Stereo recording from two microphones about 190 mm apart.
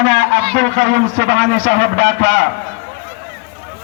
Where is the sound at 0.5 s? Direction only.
90° right.